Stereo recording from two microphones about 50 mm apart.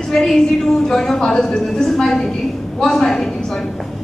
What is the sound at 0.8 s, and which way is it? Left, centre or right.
Speech, centre.